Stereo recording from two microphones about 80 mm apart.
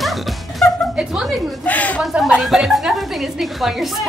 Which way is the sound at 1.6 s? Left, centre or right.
Centre.